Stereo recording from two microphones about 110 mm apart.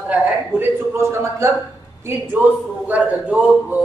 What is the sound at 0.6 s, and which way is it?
Speech, 25° right (ahead or behind).